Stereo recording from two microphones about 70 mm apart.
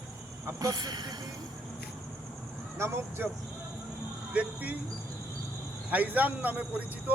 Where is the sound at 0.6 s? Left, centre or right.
Right.